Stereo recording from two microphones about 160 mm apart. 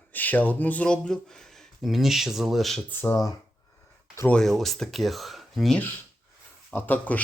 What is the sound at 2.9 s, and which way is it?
Speech, 15° left (ahead or behind).